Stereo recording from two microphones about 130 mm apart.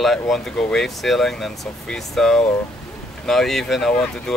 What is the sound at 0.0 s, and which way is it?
Speech, centre (ahead or behind).